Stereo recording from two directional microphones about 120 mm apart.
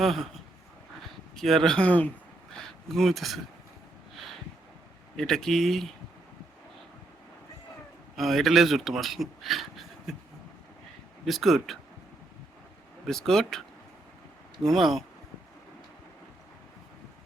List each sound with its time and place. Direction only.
0.0 s speech: centre (ahead or behind)
1.4 s a man's voice: centre (ahead or behind)
5.1 s speech: 5° left (ahead or behind)
8.1 s speech: centre (ahead or behind)
11.3 s speech: centre (ahead or behind)
13.1 s speech: 5° left (ahead or behind)
14.7 s speech: centre (ahead or behind)